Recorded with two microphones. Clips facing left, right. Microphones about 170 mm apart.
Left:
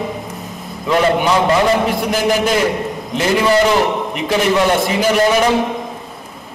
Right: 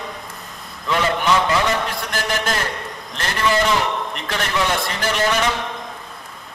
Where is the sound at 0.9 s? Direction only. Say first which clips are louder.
Left 5 dB; 35° left (ahead or behind).